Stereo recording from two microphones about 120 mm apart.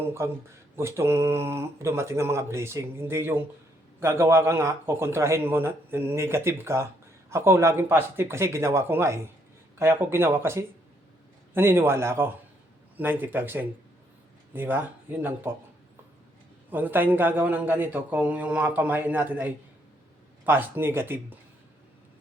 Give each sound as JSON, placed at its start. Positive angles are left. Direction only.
{"t": 0.0, "sound": "a man's voice", "side_deg": -20}
{"t": 16.6, "sound": "a man's voice", "side_deg": -15}